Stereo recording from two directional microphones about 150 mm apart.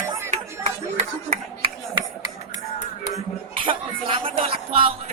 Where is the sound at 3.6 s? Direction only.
35° right (ahead or behind).